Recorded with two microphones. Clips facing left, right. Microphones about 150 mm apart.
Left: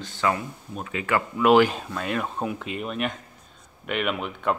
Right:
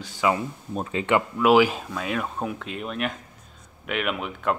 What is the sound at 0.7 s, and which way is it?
Speech, 30° right (ahead or behind).